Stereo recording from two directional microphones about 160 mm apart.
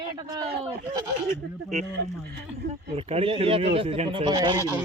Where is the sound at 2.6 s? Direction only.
90° right.